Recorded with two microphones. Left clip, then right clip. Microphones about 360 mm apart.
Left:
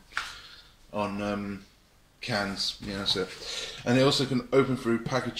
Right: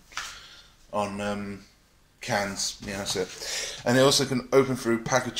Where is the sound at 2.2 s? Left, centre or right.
Centre.